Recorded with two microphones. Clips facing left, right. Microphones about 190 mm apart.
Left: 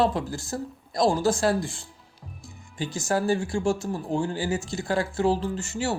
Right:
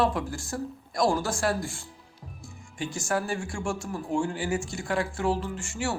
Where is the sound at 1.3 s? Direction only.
20° left (ahead or behind).